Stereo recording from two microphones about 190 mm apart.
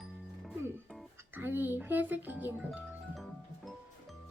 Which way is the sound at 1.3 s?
10° right (ahead or behind).